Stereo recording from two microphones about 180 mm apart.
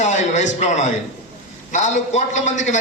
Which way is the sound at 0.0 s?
40° left (ahead or behind).